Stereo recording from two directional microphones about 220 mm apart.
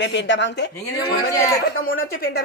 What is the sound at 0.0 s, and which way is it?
Speech, 55° left (ahead or behind).